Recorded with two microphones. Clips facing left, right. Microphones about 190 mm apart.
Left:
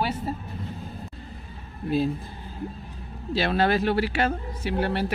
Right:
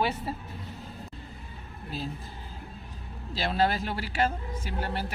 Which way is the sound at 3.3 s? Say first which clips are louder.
Left 4 dB; 65° left (ahead or behind).